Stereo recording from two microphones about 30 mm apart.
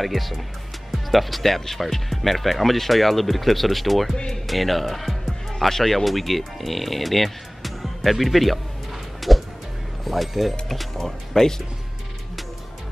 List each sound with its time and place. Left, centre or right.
0.0 s speech: centre
0.9 s music: centre
1.4 s speech: centre
9.2 s music: centre
10.0 s speech: centre
11.1 s speech: centre